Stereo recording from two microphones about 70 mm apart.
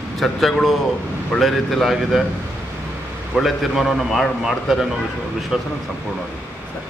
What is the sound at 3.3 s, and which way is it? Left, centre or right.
A man's voice, centre.